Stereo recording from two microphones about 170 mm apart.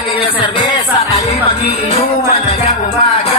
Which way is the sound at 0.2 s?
30° left (ahead or behind).